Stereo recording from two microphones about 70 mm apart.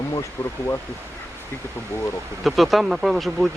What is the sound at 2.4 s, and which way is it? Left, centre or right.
Speech, centre.